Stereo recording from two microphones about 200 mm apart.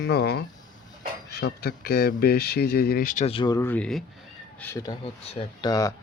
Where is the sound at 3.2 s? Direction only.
25° left (ahead or behind); by 4.0 s 5° left (ahead or behind).